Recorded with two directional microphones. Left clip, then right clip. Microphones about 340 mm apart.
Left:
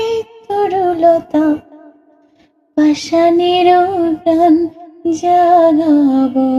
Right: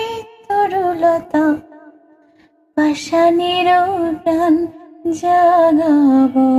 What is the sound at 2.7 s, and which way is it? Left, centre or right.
Female singing, right.